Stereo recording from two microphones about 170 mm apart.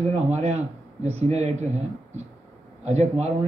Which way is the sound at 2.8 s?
40° right (ahead or behind).